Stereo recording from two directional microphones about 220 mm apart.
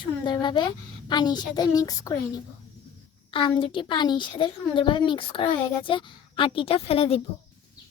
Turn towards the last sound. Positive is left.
turn(degrees=25)  # may be behind; listen again after turning